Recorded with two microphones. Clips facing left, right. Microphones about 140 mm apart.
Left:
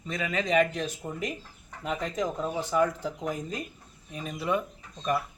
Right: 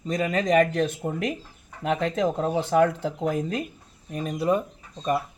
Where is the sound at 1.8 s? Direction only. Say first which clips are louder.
Right 6 dB; 75° right (ahead or behind).